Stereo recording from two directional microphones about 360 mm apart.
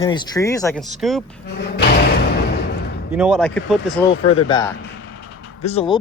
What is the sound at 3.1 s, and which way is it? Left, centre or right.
Speech, centre.